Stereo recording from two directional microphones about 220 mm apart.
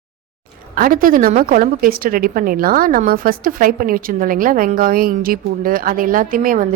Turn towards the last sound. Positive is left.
turn(degrees=-40)  # may be behind; listen again after turning